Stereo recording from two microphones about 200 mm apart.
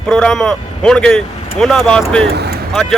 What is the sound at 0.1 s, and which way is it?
Speech, 5° left (ahead or behind).